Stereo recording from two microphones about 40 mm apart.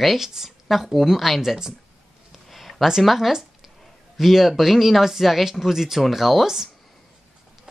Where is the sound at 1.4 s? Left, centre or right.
Centre.